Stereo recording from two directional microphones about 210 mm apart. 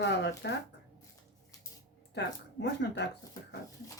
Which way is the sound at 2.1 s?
55° left (ahead or behind).